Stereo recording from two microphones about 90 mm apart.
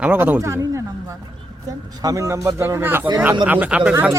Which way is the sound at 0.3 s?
30° right (ahead or behind).